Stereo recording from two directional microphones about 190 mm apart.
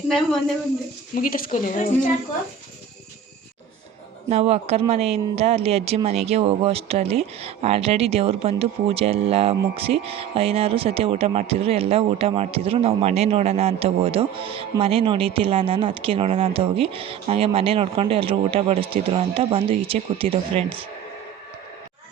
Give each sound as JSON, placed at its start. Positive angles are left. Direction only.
{"t": 0.1, "sound": "speech", "side_deg": 0}
{"t": 1.1, "sound": "speech", "side_deg": 50}
{"t": 4.3, "sound": "speech", "side_deg": -35}